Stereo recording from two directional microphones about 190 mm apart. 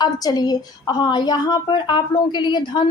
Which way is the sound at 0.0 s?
20° left (ahead or behind).